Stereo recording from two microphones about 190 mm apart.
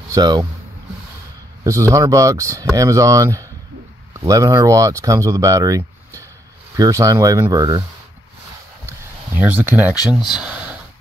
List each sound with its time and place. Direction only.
0.1 s speech: 20° right (ahead or behind)
1.6 s speech: 15° right (ahead or behind)
8.8 s speech: 10° right (ahead or behind)
10.4 s a sound: 5° right (ahead or behind)